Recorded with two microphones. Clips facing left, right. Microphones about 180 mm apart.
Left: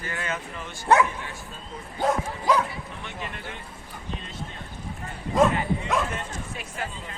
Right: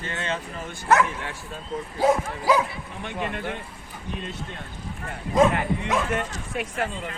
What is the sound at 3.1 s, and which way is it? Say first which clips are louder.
Speech: right 9 dB; 55° right (ahead or behind).